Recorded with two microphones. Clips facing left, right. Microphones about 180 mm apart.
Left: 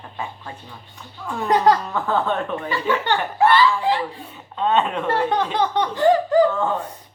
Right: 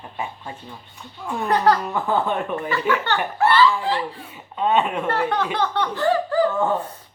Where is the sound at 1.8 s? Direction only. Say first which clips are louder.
Even; 10° right (ahead or behind).